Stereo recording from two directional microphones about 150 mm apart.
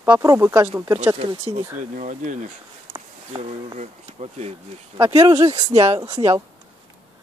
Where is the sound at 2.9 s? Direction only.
40° right (ahead or behind).